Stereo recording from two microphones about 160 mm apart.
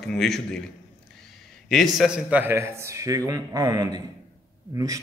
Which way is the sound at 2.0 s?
5° right (ahead or behind).